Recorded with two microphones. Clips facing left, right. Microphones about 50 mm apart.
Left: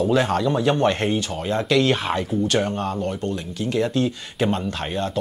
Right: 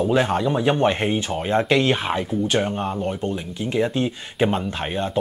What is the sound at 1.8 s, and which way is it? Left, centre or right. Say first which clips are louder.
Speech: even; centre.